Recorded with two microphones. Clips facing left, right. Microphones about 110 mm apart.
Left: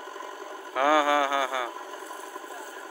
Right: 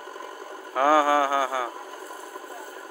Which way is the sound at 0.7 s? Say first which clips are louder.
Right 3 dB; 40° right (ahead or behind).